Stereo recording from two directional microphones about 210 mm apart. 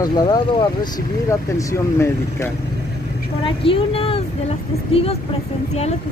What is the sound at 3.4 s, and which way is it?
Speech, 25° left (ahead or behind).